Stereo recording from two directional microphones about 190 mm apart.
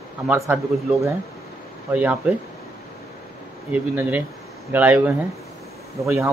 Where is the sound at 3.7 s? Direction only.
10° right (ahead or behind).